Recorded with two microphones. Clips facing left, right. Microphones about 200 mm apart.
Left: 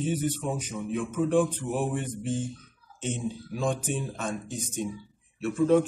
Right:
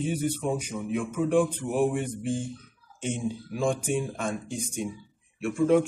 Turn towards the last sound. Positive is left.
turn(degrees=-10)  # may be behind; listen again after turning